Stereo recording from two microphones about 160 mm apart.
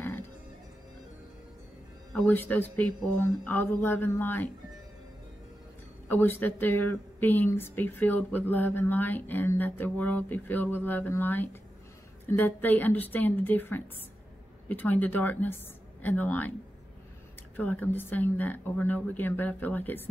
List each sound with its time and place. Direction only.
2.1 s speech: 10° left (ahead or behind)
6.0 s speech: 15° left (ahead or behind)
17.6 s speech: 10° left (ahead or behind)